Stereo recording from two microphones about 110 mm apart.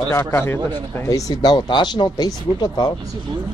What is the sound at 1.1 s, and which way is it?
Speech, 40° left (ahead or behind).